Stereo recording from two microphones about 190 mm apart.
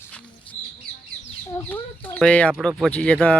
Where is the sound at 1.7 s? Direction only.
10° left (ahead or behind).